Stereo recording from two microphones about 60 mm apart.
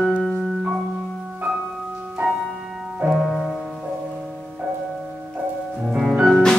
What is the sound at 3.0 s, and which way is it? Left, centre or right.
Music, centre.